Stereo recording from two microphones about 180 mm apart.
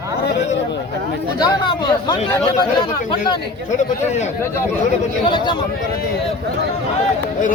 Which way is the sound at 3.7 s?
40° left (ahead or behind).